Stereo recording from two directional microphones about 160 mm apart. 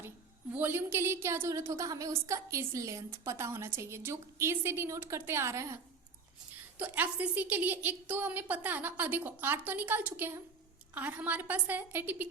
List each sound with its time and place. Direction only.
0.5 s a woman's voice: 15° right (ahead or behind)